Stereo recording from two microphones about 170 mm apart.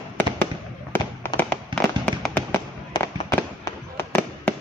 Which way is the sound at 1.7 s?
30° right (ahead or behind).